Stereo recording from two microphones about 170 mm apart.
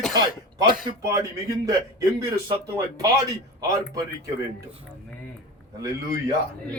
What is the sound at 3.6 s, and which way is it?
Speech, 20° right (ahead or behind).